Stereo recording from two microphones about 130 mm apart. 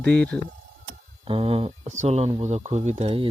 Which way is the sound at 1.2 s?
45° right (ahead or behind).